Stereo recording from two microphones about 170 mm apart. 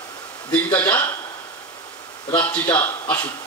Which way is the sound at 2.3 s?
20° left (ahead or behind).